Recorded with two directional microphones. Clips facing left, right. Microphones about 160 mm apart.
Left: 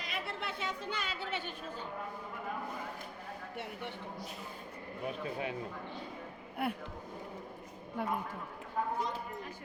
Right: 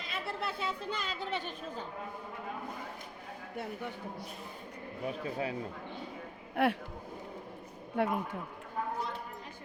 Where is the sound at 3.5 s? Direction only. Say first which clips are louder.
Right 5 dB; 40° right (ahead or behind).